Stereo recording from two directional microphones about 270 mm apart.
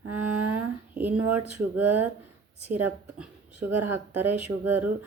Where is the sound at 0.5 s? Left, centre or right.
Centre.